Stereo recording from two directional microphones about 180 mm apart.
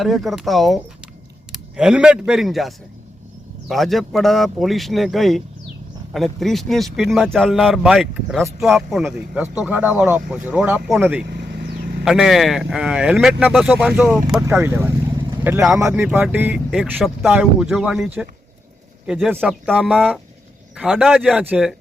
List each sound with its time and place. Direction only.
0.0 s speech: centre (ahead or behind)
11.3 s vehicle: 60° right (ahead or behind)
12.0 s speech: centre (ahead or behind)